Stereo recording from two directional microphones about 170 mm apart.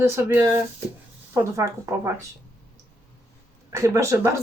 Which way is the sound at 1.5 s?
15° right (ahead or behind).